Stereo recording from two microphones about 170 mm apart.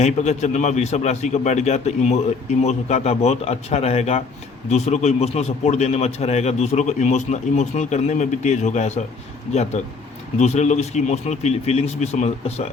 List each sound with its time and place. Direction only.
0.0 s a man's voice: 45° left (ahead or behind)